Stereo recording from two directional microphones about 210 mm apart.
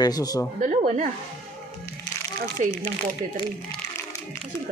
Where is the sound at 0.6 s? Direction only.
35° right (ahead or behind).